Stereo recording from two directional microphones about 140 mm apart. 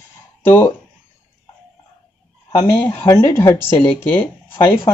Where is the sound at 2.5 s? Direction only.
20° left (ahead or behind).